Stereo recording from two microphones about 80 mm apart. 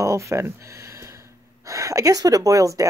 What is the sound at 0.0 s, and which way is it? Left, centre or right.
Speech, right.